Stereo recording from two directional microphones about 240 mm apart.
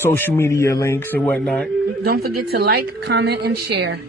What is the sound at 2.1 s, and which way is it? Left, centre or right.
A woman's voice, right.